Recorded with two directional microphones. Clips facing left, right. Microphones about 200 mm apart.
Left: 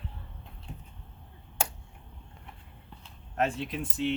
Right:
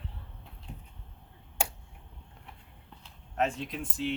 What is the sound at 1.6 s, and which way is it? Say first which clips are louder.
Finger snapping: even; 15° right (ahead or behind).